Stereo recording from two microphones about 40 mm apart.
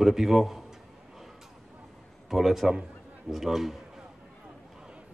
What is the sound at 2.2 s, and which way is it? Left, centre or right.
A man's voice, centre.